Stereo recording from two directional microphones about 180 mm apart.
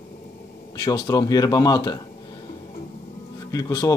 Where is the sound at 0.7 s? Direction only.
25° left (ahead or behind).